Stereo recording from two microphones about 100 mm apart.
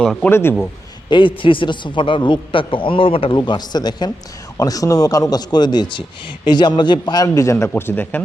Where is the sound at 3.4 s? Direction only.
45° left (ahead or behind).